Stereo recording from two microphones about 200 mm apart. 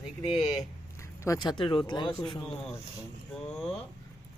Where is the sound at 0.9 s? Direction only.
15° left (ahead or behind).